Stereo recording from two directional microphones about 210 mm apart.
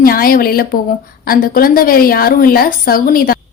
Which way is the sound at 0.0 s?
45° left (ahead or behind).